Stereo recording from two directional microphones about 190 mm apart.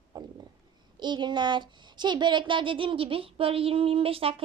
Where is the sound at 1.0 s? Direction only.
25° right (ahead or behind).